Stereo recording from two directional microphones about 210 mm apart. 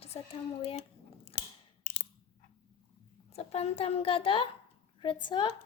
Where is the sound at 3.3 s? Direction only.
30° left (ahead or behind).